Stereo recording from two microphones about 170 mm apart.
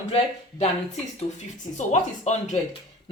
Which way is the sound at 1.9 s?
45° left (ahead or behind).